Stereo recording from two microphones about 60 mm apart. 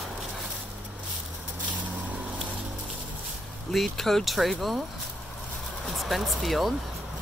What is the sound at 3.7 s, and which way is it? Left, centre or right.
Speech, centre.